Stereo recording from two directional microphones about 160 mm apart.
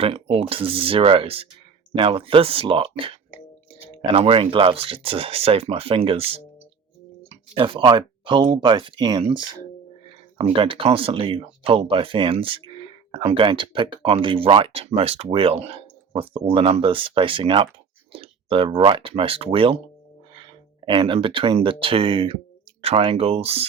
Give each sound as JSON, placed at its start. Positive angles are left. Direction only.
{"t": 0.0, "sound": "speech", "side_deg": -35}
{"t": 20.9, "sound": "speech", "side_deg": -30}